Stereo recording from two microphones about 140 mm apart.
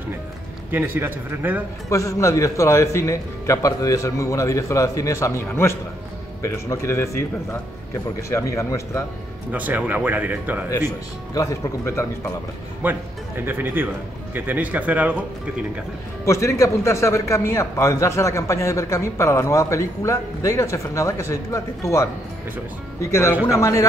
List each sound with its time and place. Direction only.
0.7 s speech: 15° right (ahead or behind)
1.9 s a man's voice: 25° left (ahead or behind)
9.5 s speech: 10° right (ahead or behind)
11.3 s a man's voice: 20° left (ahead or behind)
12.8 s speech: 10° right (ahead or behind)
16.3 s a man's voice: 20° left (ahead or behind)